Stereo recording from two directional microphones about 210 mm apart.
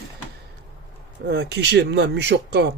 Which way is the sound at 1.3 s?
50° right (ahead or behind).